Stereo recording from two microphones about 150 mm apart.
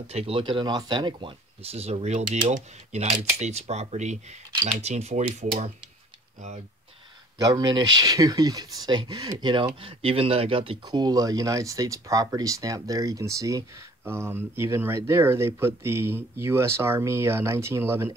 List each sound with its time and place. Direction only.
0.1 s speech: 40° right (ahead or behind)
7.3 s speech: 25° right (ahead or behind)